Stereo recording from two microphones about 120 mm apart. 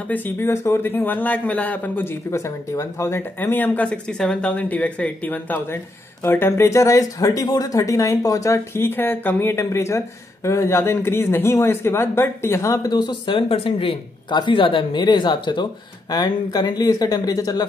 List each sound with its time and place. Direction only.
0.1 s a man's voice: 15° left (ahead or behind)